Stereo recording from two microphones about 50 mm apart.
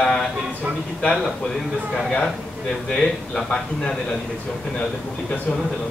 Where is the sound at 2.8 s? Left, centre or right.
Centre.